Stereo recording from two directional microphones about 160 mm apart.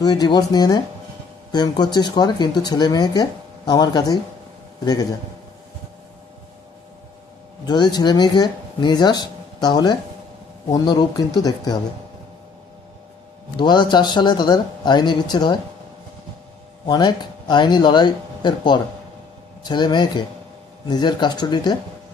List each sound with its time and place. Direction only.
0.0 s speech: 25° left (ahead or behind)
7.6 s speech: 25° left (ahead or behind)
13.6 s speech: 30° left (ahead or behind)
16.8 s speech: 25° left (ahead or behind)